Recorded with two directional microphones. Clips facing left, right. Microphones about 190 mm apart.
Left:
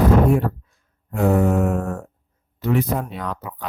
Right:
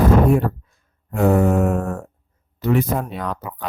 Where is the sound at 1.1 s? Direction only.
50° right (ahead or behind).